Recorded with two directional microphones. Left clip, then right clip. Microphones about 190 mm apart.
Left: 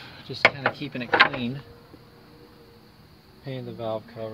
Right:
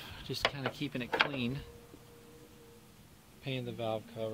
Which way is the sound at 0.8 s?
25° right (ahead or behind).